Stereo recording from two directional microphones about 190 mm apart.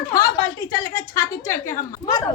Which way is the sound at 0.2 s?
20° left (ahead or behind).